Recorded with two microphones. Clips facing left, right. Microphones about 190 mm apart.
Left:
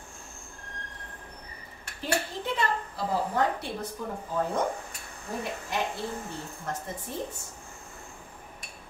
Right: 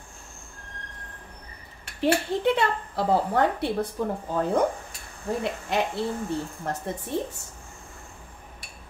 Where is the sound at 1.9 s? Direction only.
70° right (ahead or behind).